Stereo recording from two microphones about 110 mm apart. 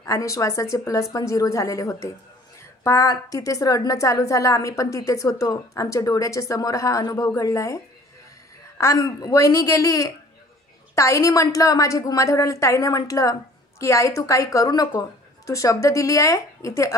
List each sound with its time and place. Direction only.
0.0 s a woman's voice: 30° left (ahead or behind)